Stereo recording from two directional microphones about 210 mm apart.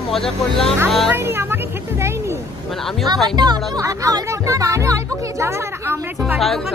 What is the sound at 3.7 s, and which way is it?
Speech, 15° right (ahead or behind).